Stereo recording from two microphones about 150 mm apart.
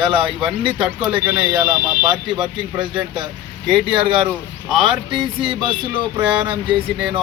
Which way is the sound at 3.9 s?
35° right (ahead or behind).